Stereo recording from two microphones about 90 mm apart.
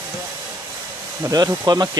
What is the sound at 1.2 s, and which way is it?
Speech, 40° right (ahead or behind).